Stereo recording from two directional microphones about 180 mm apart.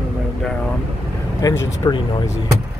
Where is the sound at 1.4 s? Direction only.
20° left (ahead or behind).